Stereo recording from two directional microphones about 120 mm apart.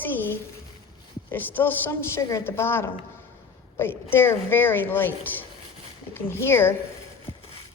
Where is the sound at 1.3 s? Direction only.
15° left (ahead or behind).